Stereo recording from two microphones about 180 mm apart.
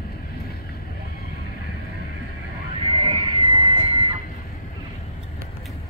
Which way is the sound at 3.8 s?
25° right (ahead or behind).